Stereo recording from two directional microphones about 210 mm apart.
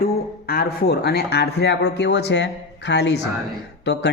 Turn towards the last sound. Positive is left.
turn(degrees=55)  # may be behind; listen again after turning